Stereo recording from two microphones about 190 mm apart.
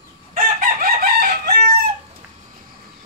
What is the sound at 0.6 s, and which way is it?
Chicken, 50° right (ahead or behind).